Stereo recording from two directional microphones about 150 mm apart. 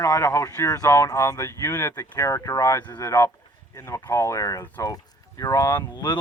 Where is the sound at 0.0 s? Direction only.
20° left (ahead or behind).